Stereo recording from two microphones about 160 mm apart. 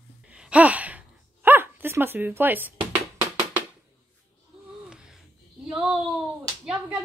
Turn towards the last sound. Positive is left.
turn(degrees=-5)  # may be behind; listen again after turning